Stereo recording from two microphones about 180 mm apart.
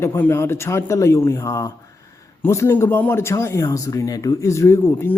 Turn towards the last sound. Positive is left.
turn(degrees=15)  # may be behind; listen again after turning